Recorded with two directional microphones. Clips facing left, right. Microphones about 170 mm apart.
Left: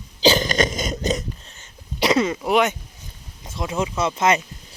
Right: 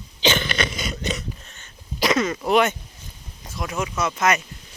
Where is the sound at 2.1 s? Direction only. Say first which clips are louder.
Left 2 dB; 30° left (ahead or behind).